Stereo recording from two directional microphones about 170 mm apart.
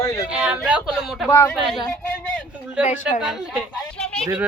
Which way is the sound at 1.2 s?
15° left (ahead or behind).